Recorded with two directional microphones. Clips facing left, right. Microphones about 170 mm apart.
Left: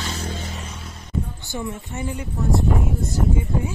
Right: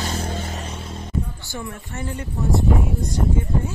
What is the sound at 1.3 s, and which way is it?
Speech, 20° left (ahead or behind).